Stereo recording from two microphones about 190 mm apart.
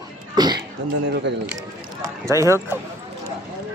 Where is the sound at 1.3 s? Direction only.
70° right (ahead or behind).